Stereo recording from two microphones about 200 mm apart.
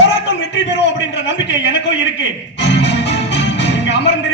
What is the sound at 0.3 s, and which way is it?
A man's voice, 65° left (ahead or behind).